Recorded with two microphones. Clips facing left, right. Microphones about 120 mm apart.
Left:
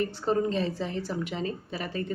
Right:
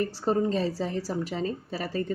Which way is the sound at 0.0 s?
35° right (ahead or behind).